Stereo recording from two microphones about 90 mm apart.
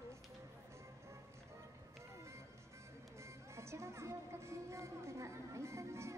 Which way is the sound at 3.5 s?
30° right (ahead or behind).